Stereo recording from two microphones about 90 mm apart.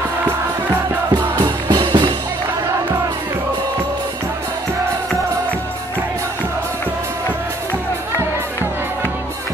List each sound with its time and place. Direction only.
1.7 s music: 60° right (ahead or behind)